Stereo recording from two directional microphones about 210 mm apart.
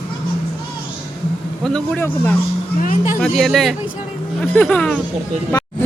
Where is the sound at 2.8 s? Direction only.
40° left (ahead or behind).